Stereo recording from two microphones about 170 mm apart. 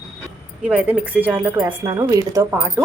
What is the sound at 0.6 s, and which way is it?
Speech, 5° right (ahead or behind).